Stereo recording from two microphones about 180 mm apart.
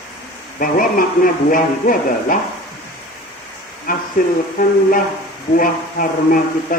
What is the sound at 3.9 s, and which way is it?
A man's voice, 50° left (ahead or behind).